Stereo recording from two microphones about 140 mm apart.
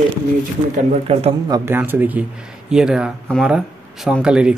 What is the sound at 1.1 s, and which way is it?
Speech, 45° right (ahead or behind).